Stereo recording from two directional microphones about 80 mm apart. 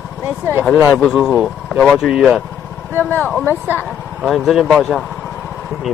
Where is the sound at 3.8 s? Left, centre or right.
Centre.